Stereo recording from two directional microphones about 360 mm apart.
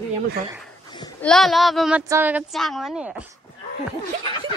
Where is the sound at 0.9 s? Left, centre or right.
Centre.